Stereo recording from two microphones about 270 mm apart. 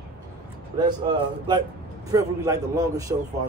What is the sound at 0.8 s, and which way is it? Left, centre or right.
Speech, centre.